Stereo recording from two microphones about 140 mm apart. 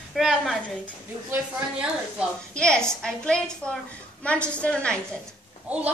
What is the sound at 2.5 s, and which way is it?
A woman's voice, 5° left (ahead or behind).